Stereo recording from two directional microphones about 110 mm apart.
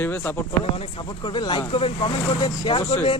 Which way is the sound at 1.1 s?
45° left (ahead or behind).